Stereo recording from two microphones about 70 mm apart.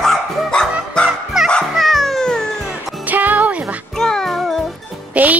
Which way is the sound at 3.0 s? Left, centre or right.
Right.